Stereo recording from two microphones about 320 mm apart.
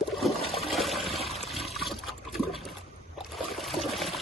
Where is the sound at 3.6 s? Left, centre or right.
Centre.